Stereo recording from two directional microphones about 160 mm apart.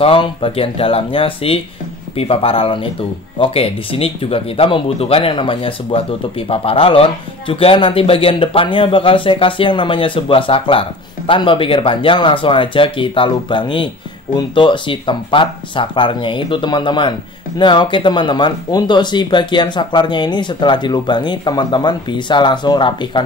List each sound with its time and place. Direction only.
0.0 s speech: 35° left (ahead or behind)